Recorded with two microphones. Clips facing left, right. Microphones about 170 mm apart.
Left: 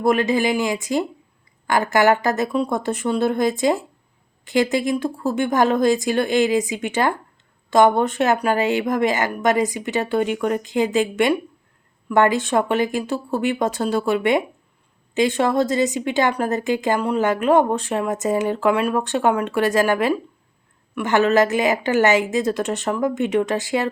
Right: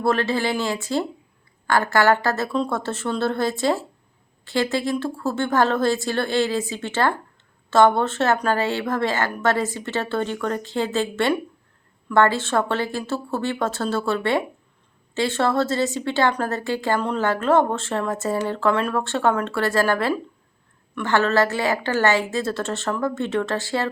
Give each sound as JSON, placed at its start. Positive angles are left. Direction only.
{"t": 0.0, "sound": "a woman's voice", "side_deg": 15}